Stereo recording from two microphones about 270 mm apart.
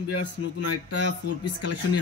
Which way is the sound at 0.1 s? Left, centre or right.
Left.